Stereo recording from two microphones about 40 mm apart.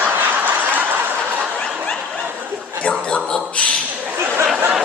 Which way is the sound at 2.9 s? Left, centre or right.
Left.